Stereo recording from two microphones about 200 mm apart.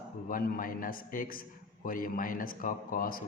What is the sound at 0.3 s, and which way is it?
A man's voice, 45° left (ahead or behind).